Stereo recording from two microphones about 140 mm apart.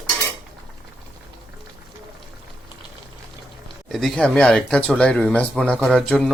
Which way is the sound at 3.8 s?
Centre (ahead or behind).